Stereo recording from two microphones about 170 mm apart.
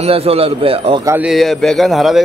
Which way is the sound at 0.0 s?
35° right (ahead or behind).